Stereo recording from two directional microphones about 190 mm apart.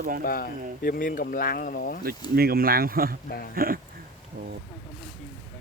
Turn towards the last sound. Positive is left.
turn(degrees=-50)  # may be behind; listen again after turning